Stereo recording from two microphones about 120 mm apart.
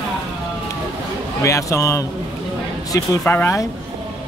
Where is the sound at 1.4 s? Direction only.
25° left (ahead or behind).